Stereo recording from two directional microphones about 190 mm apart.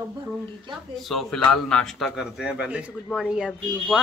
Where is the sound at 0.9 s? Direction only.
Centre (ahead or behind).